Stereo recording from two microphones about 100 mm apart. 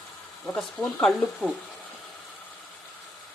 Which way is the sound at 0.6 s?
5° left (ahead or behind).